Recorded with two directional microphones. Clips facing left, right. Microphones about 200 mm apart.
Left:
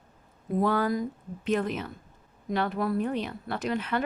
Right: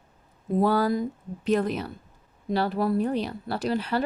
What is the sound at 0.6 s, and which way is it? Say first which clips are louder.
Speech: right 3 dB; 35° right (ahead or behind).